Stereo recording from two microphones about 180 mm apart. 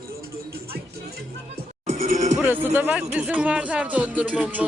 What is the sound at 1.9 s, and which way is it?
Music, 45° right (ahead or behind).